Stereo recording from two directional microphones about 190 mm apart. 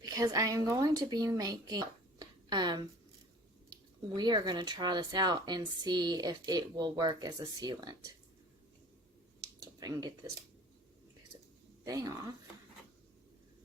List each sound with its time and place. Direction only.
0.0 s speech: 20° right (ahead or behind)
11.9 s speech: 20° right (ahead or behind)